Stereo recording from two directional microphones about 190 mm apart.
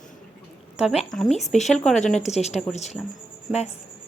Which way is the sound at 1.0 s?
Centre (ahead or behind).